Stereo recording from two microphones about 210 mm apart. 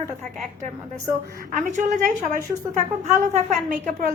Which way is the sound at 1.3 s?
40° right (ahead or behind).